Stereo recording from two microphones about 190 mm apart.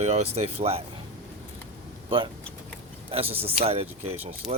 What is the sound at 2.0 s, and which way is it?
Speech, 25° right (ahead or behind).